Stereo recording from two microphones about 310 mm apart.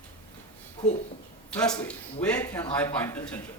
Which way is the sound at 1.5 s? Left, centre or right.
Centre.